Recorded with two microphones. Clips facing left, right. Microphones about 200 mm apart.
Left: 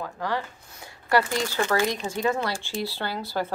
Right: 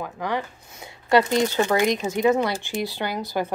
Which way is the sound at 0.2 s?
20° right (ahead or behind).